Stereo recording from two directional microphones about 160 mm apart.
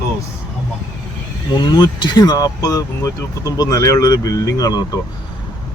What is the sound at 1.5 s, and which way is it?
Speech, 25° left (ahead or behind).